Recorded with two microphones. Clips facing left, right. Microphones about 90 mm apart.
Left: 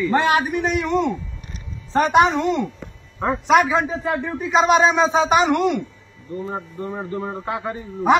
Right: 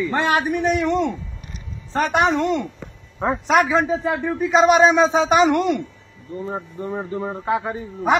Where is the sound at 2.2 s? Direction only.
Centre (ahead or behind).